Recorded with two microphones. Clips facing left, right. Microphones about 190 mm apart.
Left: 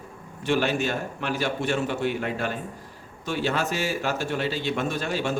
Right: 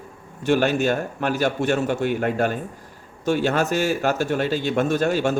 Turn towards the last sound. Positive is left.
turn(degrees=-45)  # may be behind; listen again after turning